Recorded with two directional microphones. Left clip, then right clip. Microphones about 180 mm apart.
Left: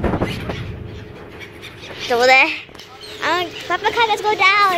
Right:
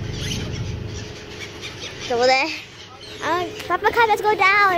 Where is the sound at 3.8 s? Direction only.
15° right (ahead or behind).